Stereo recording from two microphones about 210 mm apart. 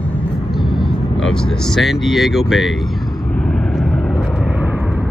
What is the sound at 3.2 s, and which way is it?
Vehicle, 5° left (ahead or behind).